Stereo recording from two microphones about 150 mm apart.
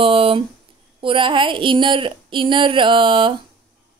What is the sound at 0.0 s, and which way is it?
A woman's voice, 35° right (ahead or behind).